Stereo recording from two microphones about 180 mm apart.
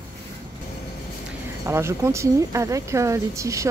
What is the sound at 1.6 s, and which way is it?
Speech, 15° right (ahead or behind).